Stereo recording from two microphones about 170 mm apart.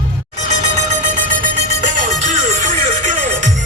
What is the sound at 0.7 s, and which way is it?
Music, 45° right (ahead or behind).